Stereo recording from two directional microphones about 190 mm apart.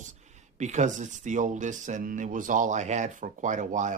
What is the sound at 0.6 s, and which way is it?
Speech, 40° right (ahead or behind).